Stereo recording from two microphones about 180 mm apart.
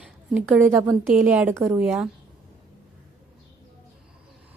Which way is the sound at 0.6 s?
15° right (ahead or behind).